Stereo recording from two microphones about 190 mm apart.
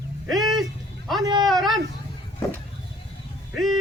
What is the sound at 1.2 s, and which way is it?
Speech, 20° right (ahead or behind).